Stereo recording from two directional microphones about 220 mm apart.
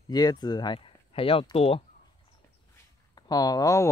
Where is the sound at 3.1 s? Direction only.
15° left (ahead or behind).